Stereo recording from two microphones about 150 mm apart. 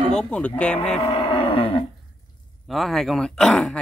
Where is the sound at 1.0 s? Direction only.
40° left (ahead or behind).